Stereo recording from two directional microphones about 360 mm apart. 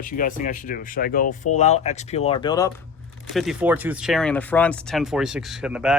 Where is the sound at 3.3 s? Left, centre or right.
Centre.